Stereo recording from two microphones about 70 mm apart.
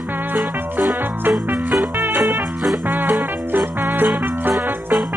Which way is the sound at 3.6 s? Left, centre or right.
Centre.